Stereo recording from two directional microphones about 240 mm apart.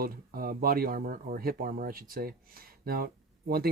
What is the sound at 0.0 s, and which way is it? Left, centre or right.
Speech, right.